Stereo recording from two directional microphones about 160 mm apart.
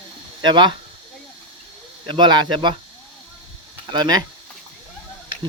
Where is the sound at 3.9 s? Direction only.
25° right (ahead or behind).